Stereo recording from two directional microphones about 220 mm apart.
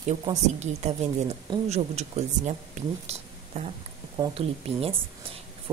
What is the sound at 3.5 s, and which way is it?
A woman's voice, 30° right (ahead or behind).